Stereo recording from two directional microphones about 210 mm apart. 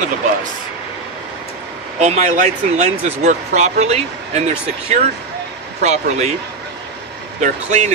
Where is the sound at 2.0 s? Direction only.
35° right (ahead or behind).